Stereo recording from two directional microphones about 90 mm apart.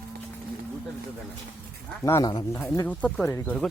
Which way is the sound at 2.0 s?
40° left (ahead or behind).